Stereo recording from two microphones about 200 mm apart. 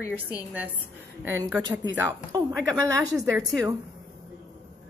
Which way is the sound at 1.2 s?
10° right (ahead or behind).